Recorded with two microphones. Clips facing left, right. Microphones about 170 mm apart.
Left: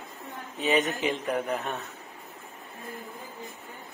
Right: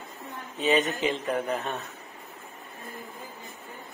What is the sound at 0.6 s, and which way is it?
Speech, 15° left (ahead or behind).